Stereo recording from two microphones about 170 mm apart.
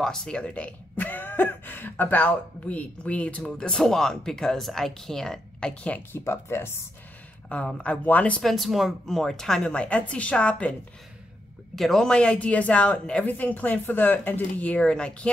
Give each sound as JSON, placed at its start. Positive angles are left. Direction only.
{"t": 0.0, "sound": "speech", "side_deg": 5}